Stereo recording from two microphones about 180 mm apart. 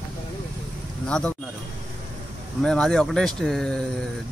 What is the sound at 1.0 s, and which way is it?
Speech, 5° left (ahead or behind).